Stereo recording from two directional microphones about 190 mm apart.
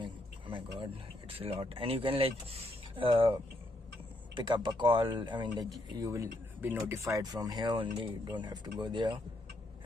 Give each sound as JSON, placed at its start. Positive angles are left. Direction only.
{"t": 0.0, "sound": "a sound", "side_deg": -25}
{"t": 1.4, "sound": "speech", "side_deg": -30}
{"t": 4.4, "sound": "speech", "side_deg": -25}